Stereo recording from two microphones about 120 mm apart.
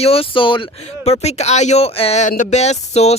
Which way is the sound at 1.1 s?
65° left (ahead or behind).